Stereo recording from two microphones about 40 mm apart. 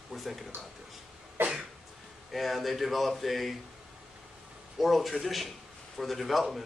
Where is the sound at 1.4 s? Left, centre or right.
Right.